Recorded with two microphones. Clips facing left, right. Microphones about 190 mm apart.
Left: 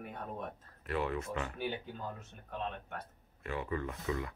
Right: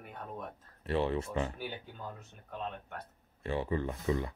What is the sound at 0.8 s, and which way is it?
Speech, 30° right (ahead or behind).